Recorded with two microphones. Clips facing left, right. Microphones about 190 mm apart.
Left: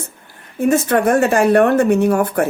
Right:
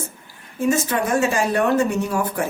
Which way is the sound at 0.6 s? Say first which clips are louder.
Left 6 dB; 60° left (ahead or behind).